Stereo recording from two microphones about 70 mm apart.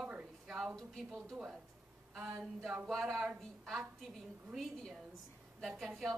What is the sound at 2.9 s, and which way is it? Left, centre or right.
A woman's voice, centre.